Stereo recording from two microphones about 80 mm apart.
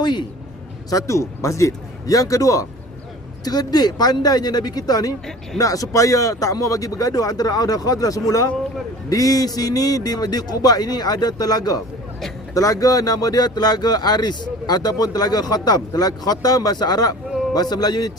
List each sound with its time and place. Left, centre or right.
0.0 s a man's voice: left
0.9 s speech: left
3.4 s speech: left